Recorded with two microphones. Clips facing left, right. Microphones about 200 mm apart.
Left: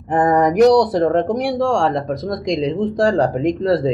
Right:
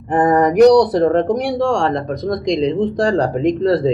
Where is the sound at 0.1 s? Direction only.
Centre (ahead or behind).